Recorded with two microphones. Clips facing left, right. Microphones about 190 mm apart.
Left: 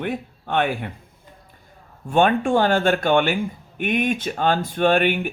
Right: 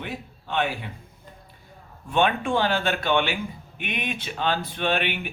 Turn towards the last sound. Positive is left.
turn(degrees=45)  # may be behind; listen again after turning